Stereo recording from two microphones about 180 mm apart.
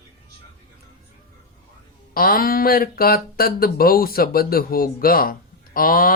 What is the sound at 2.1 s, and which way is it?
Speech, 55° left (ahead or behind).